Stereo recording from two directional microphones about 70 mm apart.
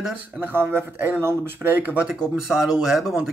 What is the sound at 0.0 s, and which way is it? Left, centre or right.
Speech, centre.